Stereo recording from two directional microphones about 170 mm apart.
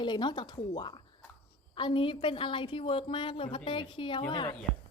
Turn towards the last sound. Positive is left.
turn(degrees=25)  # may be behind; listen again after turning